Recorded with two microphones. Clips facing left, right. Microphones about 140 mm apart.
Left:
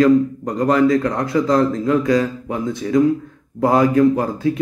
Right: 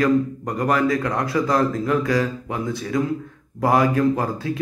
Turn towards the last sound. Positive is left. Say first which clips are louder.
# left 5 dB
turn(degrees=25)  # may be behind; listen again after turning